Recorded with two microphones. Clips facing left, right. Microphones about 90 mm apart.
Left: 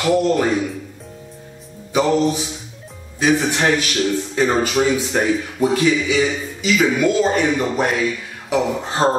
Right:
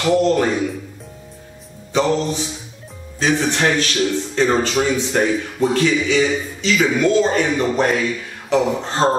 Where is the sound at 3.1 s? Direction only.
10° left (ahead or behind).